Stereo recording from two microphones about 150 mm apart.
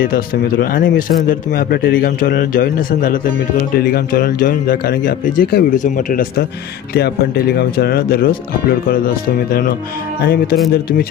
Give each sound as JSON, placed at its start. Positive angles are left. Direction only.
{"t": 0.6, "sound": "a man's voice", "side_deg": 70}
{"t": 3.7, "sound": "speech", "side_deg": 90}
{"t": 5.8, "sound": "a man's voice", "side_deg": 65}
{"t": 6.9, "sound": "speech", "side_deg": 90}